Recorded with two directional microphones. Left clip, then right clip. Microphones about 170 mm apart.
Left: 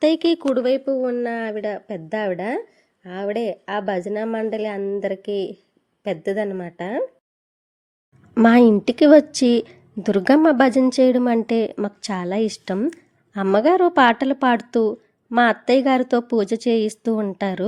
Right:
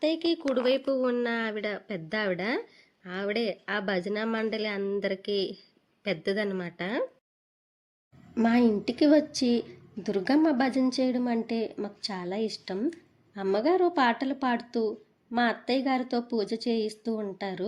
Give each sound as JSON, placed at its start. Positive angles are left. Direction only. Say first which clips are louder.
{"t": 0.0, "sound": "a woman's voice", "louder": "left 9 dB", "side_deg": 45}
{"t": 0.5, "sound": "a woman's voice", "louder": "left 6 dB", "side_deg": 30}
{"t": 5.3, "sound": "a woman's voice", "louder": "left 5 dB", "side_deg": 55}
{"t": 6.0, "sound": "a woman's voice", "louder": "left 6 dB", "side_deg": 20}
{"t": 8.4, "sound": "a woman's voice", "louder": "left 11 dB", "side_deg": 40}
{"t": 15.3, "sound": "a woman's voice", "louder": "left 11 dB", "side_deg": 40}